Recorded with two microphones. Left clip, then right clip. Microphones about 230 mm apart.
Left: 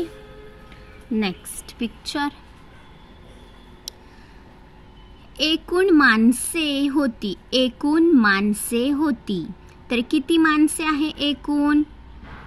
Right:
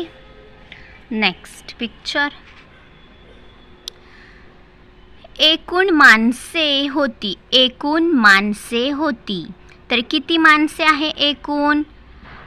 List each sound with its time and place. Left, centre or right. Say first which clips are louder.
0.7 s a woman's voice: right 1 dB; centre
5.4 s a woman's voice: right 5 dB; centre